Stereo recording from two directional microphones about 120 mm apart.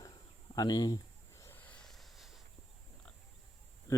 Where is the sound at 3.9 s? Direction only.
25° left (ahead or behind).